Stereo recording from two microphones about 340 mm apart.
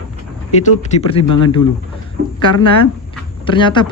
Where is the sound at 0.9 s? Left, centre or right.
Centre.